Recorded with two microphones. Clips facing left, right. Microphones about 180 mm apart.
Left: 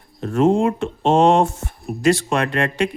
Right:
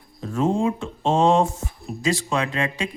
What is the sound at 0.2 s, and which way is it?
Speech, 70° left (ahead or behind).